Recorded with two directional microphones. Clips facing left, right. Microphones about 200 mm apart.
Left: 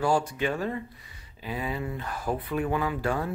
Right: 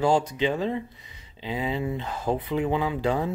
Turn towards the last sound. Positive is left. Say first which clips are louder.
# right 3 dB
turn(degrees=-20)  # may be behind; listen again after turning